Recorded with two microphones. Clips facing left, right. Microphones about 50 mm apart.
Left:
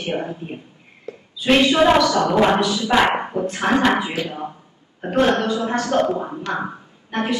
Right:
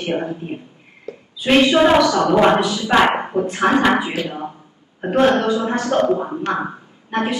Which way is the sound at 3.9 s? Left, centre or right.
Right.